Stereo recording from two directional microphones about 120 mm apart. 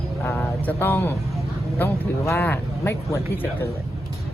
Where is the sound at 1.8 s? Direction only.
20° left (ahead or behind).